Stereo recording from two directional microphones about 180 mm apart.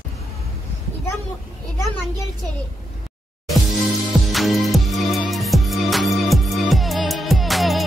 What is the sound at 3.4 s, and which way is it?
Music, centre (ahead or behind).